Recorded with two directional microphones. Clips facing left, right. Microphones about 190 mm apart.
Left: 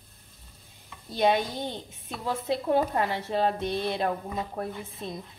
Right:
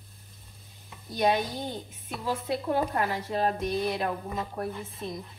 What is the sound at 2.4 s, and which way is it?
Speech, 25° left (ahead or behind).